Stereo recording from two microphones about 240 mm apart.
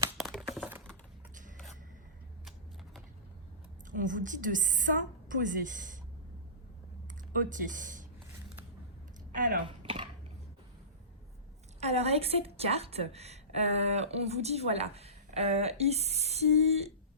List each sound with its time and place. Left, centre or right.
0.2 s computer keyboard: centre
3.9 s a woman's voice: right
7.3 s a woman's voice: right
9.6 s a sound: right
11.8 s a woman's voice: right